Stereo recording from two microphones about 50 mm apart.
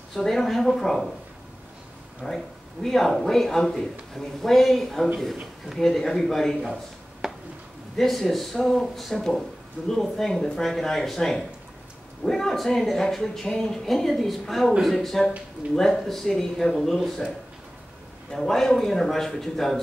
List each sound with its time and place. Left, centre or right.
0.1 s speech: centre
2.2 s speech: centre
7.2 s a sound: centre
8.0 s speech: centre
16.6 s speech: centre
16.9 s speech: centre
18.3 s speech: centre